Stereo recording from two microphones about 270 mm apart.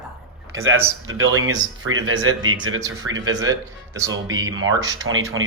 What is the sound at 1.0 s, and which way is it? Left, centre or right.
Speech, right.